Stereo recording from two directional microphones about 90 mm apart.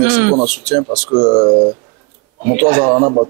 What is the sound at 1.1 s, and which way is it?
Speech, 40° right (ahead or behind).